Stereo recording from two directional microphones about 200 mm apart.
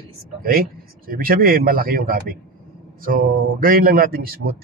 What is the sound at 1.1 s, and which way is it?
A man's voice, 45° right (ahead or behind).